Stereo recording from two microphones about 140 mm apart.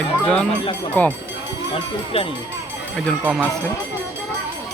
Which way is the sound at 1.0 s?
10° left (ahead or behind).